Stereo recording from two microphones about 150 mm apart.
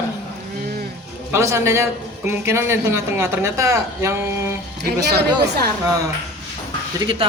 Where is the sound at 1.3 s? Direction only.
20° right (ahead or behind).